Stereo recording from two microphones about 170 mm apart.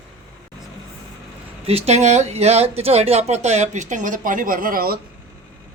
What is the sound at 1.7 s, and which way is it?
Speech, 40° right (ahead or behind).